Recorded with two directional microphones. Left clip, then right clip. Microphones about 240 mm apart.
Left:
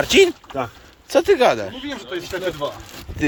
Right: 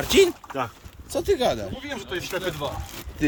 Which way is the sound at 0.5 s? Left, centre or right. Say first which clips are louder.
Left 2 dB; left.